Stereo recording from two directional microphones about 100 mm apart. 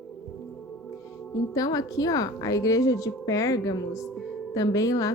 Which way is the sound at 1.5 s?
35° left (ahead or behind).